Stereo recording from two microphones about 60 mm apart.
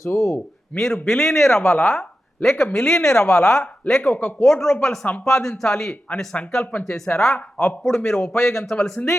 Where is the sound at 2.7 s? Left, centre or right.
Centre.